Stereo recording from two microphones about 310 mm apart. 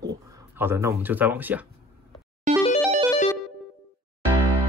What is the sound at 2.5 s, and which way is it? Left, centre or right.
Music, right.